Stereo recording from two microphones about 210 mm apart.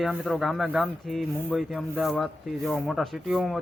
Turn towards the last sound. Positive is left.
turn(degrees=0)  # may be behind; listen again after turning